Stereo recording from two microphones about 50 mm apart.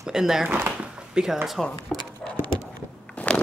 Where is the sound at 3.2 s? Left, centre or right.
Left.